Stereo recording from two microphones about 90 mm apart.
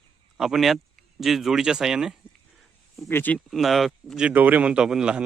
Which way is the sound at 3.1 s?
25° left (ahead or behind).